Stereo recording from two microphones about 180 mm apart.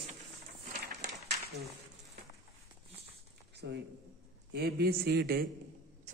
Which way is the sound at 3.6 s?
70° right (ahead or behind).